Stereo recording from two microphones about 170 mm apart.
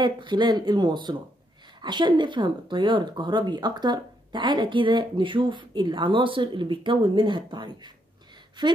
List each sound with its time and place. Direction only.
0.0 s speech: 25° right (ahead or behind)